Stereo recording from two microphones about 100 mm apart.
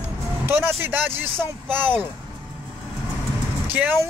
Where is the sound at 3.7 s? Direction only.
15° right (ahead or behind).